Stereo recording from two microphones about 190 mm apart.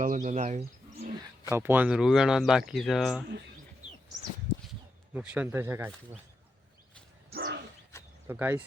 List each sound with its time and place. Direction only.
0.0 s speech: 45° right (ahead or behind)
1.5 s speech: 15° right (ahead or behind)
3.8 s bird: 40° right (ahead or behind)
5.1 s speech: 5° right (ahead or behind)
7.3 s dog: 65° right (ahead or behind)
8.3 s speech: 10° right (ahead or behind)